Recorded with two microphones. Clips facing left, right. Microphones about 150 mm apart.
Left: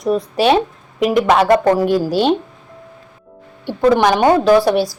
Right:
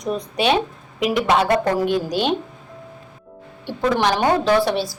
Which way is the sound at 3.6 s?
65° left (ahead or behind).